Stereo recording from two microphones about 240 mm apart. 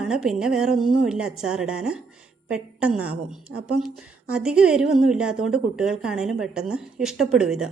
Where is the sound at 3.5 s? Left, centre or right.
Right.